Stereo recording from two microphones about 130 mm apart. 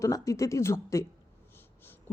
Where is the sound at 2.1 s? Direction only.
20° left (ahead or behind).